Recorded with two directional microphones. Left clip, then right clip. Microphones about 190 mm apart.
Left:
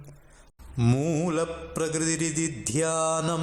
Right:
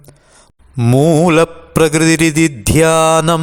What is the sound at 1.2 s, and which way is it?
Mantra, 50° right (ahead or behind).